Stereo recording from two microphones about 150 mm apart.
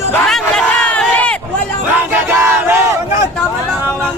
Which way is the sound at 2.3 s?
15° right (ahead or behind).